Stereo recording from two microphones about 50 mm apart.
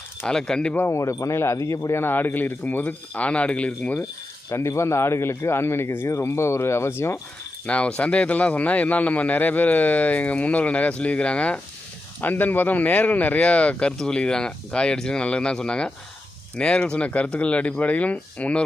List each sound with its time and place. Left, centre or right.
0.3 s speech: centre
0.9 s speech: left
2.0 s speech: left
4.4 s speech: left
6.1 s speech: left
7.7 s speech: left
12.2 s speech: left